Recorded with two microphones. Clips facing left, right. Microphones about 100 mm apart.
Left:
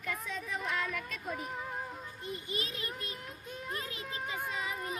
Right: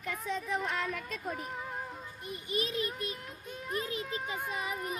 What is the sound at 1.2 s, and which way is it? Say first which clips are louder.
Music: right 1 dB; centre (ahead or behind).